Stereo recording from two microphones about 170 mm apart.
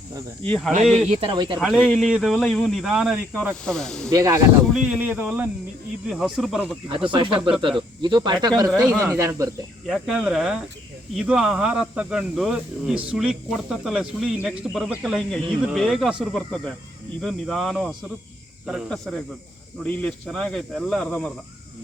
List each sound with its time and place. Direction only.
0.4 s speech: 10° left (ahead or behind)
1.0 s speech: 35° right (ahead or behind)
1.5 s speech: centre (ahead or behind)
4.1 s speech: 20° right (ahead or behind)
4.7 s speech: 5° right (ahead or behind)
7.1 s speech: 30° right (ahead or behind)
9.8 s speech: centre (ahead or behind)